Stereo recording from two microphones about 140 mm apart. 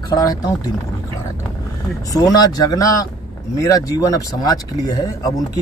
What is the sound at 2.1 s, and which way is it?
Speech, 25° left (ahead or behind).